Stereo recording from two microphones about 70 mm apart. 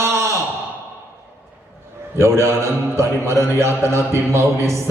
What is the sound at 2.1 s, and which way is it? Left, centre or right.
A man's voice, right.